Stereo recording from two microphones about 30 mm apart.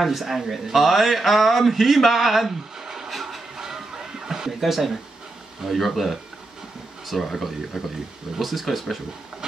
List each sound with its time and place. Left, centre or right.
0.0 s a man's voice: centre
2.8 s a sound: centre
3.1 s train: centre
3.5 s a sound: centre
4.6 s a man's voice: centre
7.7 s a man's voice: centre
9.4 s steam: right